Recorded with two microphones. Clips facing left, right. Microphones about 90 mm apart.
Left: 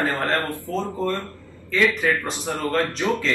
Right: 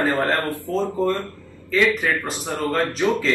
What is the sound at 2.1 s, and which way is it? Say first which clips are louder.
Speech: even; 20° right (ahead or behind).